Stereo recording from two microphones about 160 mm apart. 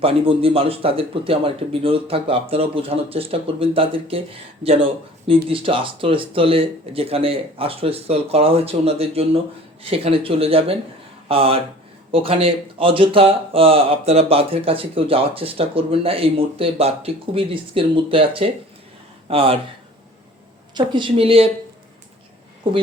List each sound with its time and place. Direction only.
0.0 s speech: 35° right (ahead or behind)
20.7 s speech: 30° right (ahead or behind)
22.6 s speech: 30° right (ahead or behind)